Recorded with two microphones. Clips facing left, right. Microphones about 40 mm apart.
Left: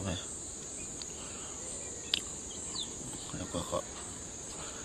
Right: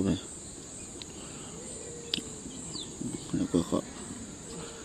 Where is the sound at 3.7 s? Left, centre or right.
Centre.